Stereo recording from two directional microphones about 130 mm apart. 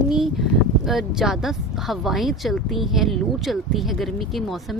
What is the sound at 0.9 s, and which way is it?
Speech, centre (ahead or behind).